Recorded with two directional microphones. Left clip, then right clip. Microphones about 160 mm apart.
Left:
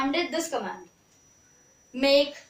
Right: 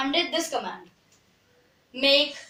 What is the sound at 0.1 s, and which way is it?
Speech, 20° left (ahead or behind).